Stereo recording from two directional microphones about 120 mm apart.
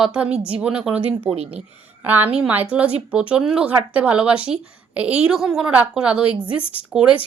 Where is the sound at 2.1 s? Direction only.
15° right (ahead or behind).